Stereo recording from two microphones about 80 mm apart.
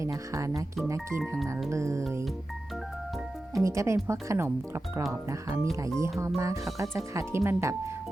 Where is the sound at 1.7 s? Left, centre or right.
Right.